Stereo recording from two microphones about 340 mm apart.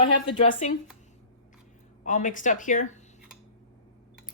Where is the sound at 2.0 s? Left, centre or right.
Left.